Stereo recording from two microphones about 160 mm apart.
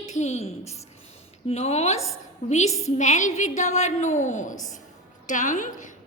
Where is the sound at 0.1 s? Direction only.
45° left (ahead or behind).